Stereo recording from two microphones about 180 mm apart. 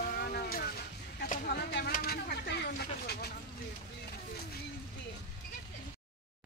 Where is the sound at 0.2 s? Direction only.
55° left (ahead or behind).